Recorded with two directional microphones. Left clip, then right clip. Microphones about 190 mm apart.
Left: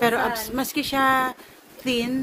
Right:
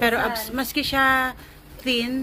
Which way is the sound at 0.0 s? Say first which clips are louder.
Even; 15° left (ahead or behind).